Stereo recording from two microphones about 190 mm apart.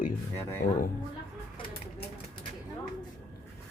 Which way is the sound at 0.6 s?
45° left (ahead or behind).